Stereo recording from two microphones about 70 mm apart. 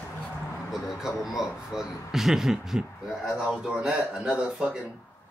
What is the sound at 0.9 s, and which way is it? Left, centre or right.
A man's voice, centre.